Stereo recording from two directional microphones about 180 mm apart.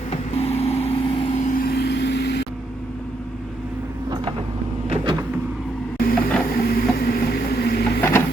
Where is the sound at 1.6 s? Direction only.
65° left (ahead or behind).